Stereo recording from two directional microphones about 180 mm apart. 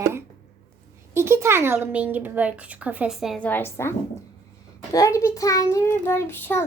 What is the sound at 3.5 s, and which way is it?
Speech, 10° left (ahead or behind).